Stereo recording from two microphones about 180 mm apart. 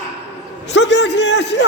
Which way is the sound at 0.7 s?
80° left.